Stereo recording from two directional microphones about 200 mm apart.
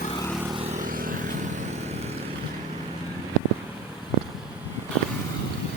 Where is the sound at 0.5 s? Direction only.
30° right (ahead or behind).